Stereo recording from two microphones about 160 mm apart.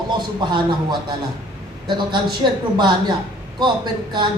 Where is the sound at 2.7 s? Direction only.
30° right (ahead or behind).